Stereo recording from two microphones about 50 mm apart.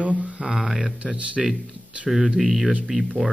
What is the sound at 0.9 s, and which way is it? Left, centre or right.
Speech, right.